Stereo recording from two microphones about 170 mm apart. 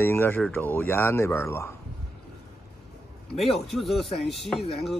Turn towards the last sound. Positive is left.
turn(degrees=35)  # may be behind; listen again after turning